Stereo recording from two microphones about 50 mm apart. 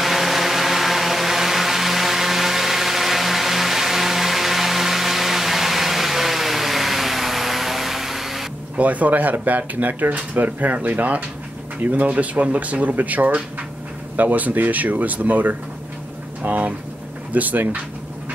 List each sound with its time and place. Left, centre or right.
0.0 s vehicle: centre
8.7 s speech: right